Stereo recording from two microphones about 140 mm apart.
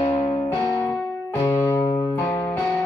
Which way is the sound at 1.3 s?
20° left (ahead or behind).